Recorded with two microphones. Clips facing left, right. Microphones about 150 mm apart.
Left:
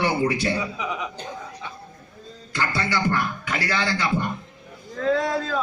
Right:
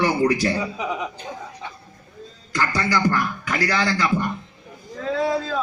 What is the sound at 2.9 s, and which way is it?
Speech, 25° left (ahead or behind).